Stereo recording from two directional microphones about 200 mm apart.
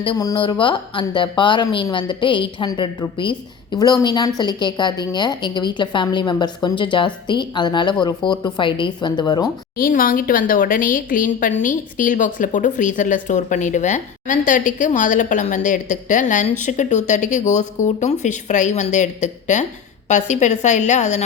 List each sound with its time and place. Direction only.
0.0 s a woman's voice: 20° left (ahead or behind)
9.7 s a woman's voice: 45° left (ahead or behind)